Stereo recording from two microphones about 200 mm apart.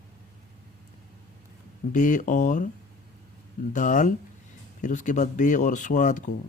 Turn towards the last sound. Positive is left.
turn(degrees=40)  # may be behind; listen again after turning